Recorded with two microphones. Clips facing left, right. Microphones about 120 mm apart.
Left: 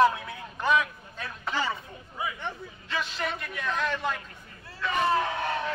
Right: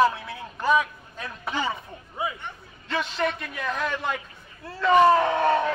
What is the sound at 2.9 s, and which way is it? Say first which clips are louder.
Speech: right 5 dB; 40° right (ahead or behind).